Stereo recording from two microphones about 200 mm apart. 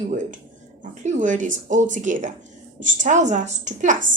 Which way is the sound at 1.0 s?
40° right (ahead or behind).